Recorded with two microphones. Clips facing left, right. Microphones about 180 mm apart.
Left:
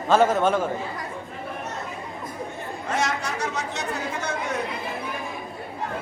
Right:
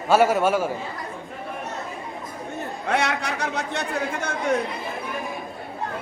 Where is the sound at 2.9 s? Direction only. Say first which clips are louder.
Right 2 dB; 65° right (ahead or behind).